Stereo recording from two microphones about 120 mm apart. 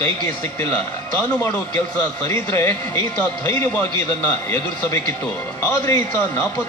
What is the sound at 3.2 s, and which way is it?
A man's voice, 15° left (ahead or behind).